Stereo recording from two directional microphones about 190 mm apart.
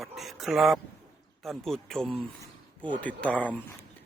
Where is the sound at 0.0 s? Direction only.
Centre (ahead or behind).